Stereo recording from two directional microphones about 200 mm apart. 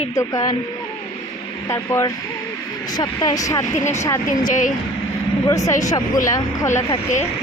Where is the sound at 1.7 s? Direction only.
15° left (ahead or behind).